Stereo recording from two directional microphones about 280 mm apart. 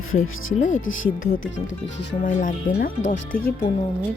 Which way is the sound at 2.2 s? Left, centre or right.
Left.